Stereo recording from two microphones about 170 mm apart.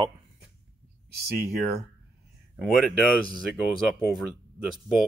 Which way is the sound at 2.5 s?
Centre (ahead or behind).